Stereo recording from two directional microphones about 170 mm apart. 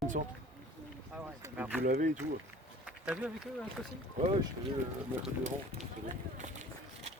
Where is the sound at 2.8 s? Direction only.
5° right (ahead or behind).